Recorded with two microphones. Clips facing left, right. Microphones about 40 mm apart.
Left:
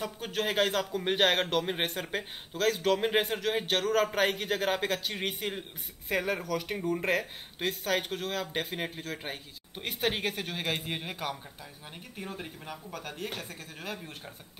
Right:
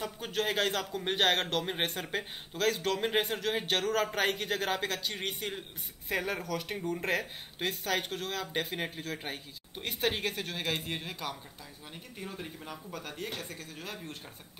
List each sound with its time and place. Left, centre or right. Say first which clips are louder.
0.0 s speech: left 1 dB; centre
11.0 s speech: left 3 dB; centre
12.2 s speech: left 2 dB; centre